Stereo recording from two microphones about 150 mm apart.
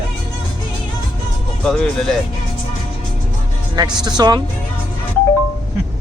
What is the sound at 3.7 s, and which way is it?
Speech, 30° right (ahead or behind).